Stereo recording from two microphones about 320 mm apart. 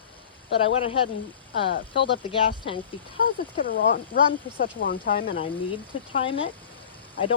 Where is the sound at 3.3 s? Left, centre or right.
Left.